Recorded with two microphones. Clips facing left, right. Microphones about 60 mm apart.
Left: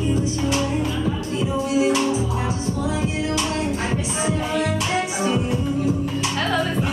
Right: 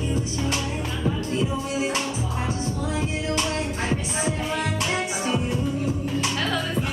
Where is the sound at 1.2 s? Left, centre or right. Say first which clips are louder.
Left 2 dB; centre.